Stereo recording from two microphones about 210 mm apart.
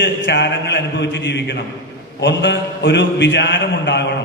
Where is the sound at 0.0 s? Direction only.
55° left (ahead or behind).